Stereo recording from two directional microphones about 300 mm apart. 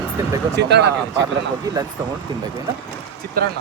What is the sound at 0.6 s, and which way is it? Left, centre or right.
Speech, right.